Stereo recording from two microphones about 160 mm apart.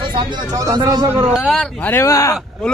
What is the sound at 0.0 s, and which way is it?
Speech, 30° right (ahead or behind).